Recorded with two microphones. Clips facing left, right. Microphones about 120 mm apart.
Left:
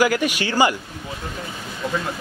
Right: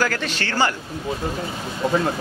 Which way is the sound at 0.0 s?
10° left (ahead or behind).